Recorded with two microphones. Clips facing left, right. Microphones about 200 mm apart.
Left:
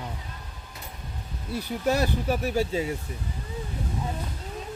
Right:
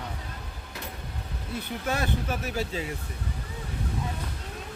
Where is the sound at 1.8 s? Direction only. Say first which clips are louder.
Left 6 dB; 40° left (ahead or behind).